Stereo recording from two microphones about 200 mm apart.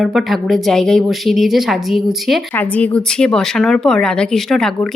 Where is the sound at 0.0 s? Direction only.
Centre (ahead or behind).